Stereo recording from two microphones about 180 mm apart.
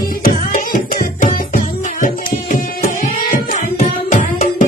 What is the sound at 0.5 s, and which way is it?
Music, 50° left (ahead or behind).